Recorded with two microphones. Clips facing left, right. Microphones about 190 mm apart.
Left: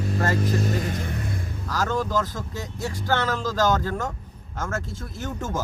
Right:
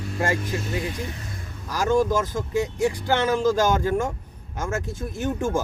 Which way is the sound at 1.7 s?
10° right (ahead or behind).